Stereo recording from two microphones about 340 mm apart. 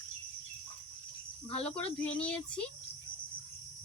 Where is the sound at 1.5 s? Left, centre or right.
Centre.